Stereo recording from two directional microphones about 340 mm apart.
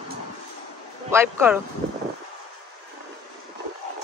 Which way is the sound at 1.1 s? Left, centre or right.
Centre.